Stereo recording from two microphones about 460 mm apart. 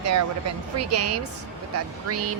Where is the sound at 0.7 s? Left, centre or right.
Right.